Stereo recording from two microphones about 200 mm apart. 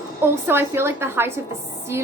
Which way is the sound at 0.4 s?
10° right (ahead or behind).